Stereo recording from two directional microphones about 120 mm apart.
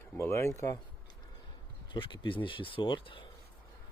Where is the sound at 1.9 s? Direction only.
45° left (ahead or behind).